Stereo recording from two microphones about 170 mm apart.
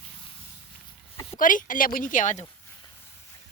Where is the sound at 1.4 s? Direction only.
50° left (ahead or behind).